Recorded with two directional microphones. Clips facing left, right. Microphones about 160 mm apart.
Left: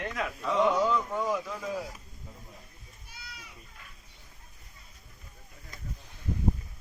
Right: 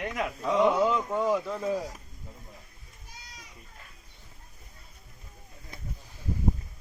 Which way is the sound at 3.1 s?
40° right (ahead or behind).